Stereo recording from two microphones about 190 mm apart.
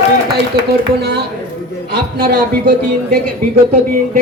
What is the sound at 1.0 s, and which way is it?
A man's voice, 60° right (ahead or behind).